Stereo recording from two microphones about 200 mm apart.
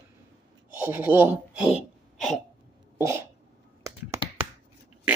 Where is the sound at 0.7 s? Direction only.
10° right (ahead or behind).